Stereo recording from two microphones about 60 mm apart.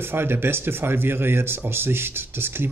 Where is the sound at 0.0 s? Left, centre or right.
Right.